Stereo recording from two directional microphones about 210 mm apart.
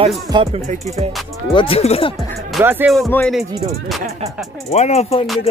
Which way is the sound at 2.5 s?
5° right (ahead or behind).